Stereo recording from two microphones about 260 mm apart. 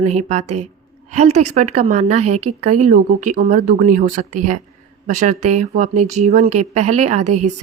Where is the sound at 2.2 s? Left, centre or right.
Right.